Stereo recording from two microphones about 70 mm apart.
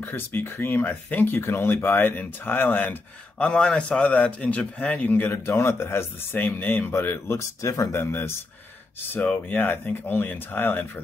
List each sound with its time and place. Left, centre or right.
0.0 s speech: left
3.4 s speech: centre
5.5 s speech: left
7.3 s speech: left
8.0 s speech: left